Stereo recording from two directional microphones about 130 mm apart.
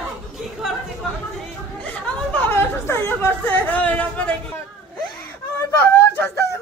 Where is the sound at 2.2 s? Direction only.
15° left (ahead or behind).